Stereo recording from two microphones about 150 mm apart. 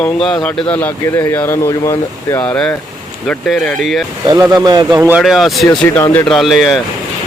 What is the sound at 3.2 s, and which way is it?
Speech, 5° left (ahead or behind).